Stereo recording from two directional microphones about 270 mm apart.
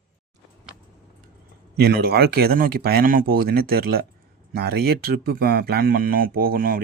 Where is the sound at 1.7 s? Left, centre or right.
Right.